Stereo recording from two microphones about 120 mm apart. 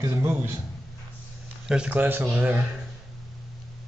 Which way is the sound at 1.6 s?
10° right (ahead or behind).